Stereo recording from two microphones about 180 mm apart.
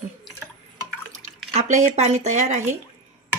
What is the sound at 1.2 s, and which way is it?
Speech, 40° right (ahead or behind).